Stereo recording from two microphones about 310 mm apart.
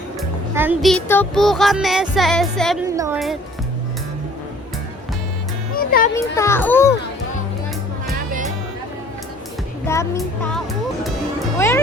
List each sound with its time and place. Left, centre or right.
0.2 s speech: centre
2.8 s a woman's voice: centre
5.7 s music: left
6.1 s child singing: centre
9.8 s child singing: centre
11.5 s a child's voice: centre